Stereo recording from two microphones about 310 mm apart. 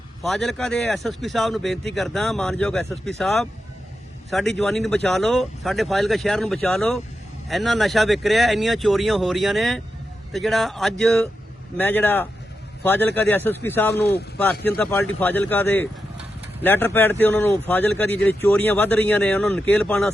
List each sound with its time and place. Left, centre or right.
0.2 s speech: centre
14.0 s speech: left
14.6 s speech: centre